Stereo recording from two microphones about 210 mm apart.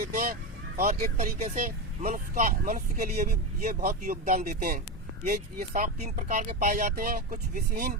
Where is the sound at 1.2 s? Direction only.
35° right (ahead or behind).